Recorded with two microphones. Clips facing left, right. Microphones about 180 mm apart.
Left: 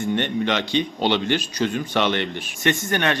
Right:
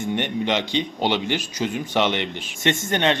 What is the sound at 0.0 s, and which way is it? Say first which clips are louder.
A man's voice: left 2 dB; 15° right (ahead or behind).